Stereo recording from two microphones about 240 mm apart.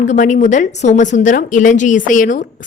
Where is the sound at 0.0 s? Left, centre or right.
Left.